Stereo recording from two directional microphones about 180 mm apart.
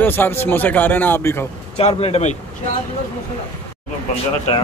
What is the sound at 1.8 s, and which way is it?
Speech, 35° left (ahead or behind).